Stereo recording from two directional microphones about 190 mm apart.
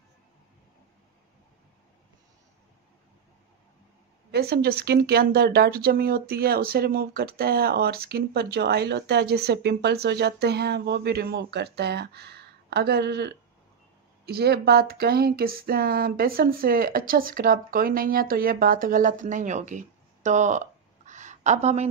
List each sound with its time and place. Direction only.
4.3 s speech: 55° right (ahead or behind); by 21.8 s 35° right (ahead or behind)